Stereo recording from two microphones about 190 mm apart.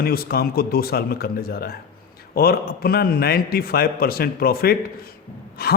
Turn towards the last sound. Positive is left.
turn(degrees=55)  # may be behind; listen again after turning